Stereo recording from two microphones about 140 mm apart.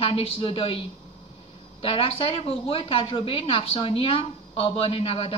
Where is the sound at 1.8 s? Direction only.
45° left (ahead or behind).